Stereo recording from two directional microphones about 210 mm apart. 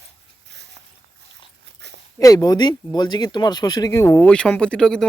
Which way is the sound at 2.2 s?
15° left (ahead or behind).